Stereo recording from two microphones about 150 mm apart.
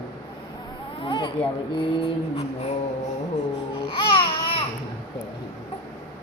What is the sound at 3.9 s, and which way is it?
Babbling, 35° left (ahead or behind).